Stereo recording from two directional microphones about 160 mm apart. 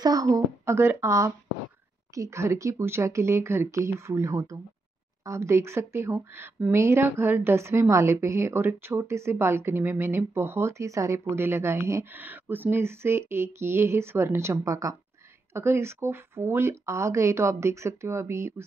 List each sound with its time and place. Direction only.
0.0 s a woman's voice: 20° right (ahead or behind)